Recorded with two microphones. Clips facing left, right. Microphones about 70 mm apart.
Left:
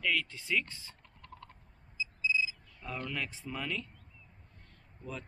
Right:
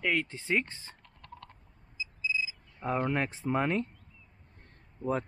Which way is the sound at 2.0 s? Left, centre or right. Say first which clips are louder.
Left 1 dB; centre.